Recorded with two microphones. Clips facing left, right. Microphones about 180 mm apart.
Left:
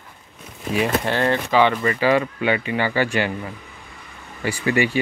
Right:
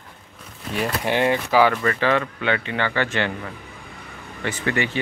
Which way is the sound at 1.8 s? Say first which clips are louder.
Left 2 dB; 10° left (ahead or behind).